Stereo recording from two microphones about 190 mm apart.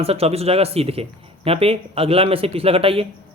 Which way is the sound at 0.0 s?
30° right (ahead or behind).